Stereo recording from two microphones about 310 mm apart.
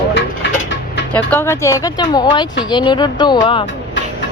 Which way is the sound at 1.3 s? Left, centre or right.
Centre.